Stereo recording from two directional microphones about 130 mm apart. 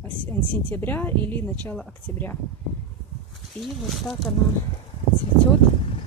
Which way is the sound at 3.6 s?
Centre (ahead or behind).